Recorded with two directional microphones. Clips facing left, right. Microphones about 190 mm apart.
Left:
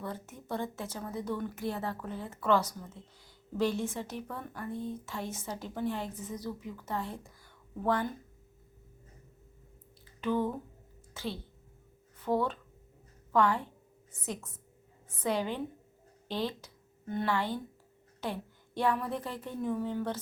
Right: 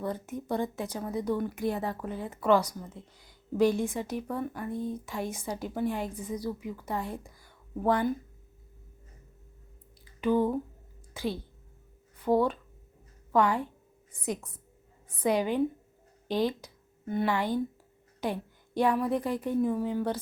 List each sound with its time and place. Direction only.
0.0 s a woman's voice: 15° right (ahead or behind)
10.2 s a woman's voice: 10° right (ahead or behind)